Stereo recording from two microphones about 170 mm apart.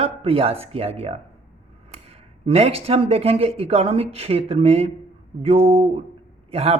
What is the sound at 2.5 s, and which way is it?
A man's voice, 35° right (ahead or behind).